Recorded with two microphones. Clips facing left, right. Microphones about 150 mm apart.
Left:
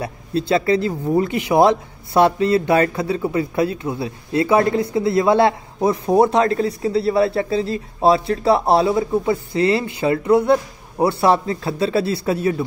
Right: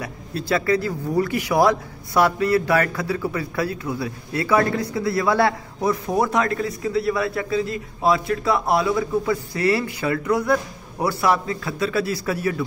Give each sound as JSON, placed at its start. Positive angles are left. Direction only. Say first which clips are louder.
{"t": 0.0, "sound": "speech", "louder": "left 7 dB", "side_deg": 25}